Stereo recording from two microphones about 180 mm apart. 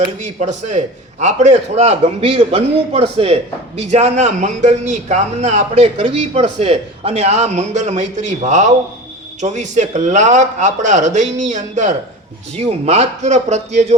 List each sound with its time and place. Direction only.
0.2 s a man's voice: 40° right (ahead or behind)